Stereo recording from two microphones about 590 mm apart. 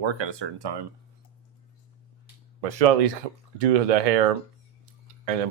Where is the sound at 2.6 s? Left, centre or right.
Right.